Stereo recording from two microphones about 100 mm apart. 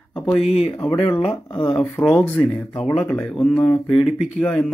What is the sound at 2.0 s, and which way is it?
Speech, 10° left (ahead or behind).